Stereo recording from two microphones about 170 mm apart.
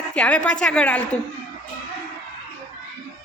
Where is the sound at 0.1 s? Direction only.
5° left (ahead or behind).